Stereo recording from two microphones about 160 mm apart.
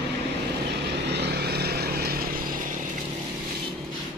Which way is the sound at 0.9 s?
90° right.